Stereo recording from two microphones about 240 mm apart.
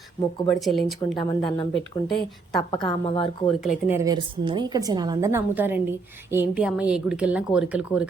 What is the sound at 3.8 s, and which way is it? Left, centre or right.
A woman's voice, centre.